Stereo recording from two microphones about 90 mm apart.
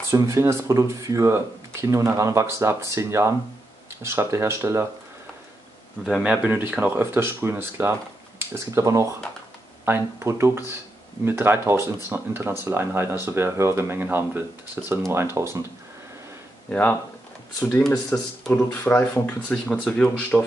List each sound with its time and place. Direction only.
0.1 s speech: 35° right (ahead or behind)
6.2 s speech: 10° right (ahead or behind); by 15.6 s 30° right (ahead or behind)
16.7 s speech: 10° left (ahead or behind)